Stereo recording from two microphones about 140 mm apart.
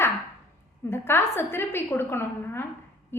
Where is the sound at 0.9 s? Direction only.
15° left (ahead or behind).